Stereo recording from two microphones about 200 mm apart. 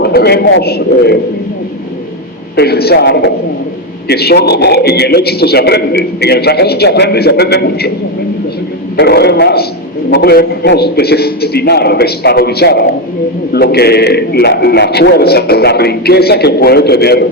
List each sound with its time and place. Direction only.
0.0 s a man's voice: 50° left (ahead or behind)
2.6 s a man's voice: 50° left (ahead or behind)
9.0 s a man's voice: 55° left (ahead or behind)